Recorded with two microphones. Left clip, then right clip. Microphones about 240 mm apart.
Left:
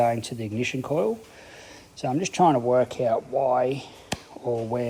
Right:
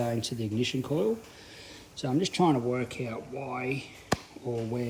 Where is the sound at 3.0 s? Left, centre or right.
Right.